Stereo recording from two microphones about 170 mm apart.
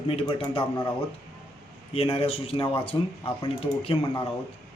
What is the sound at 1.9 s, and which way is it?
Speech, 35° left (ahead or behind).